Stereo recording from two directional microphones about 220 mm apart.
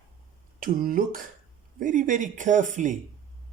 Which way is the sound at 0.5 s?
40° right (ahead or behind).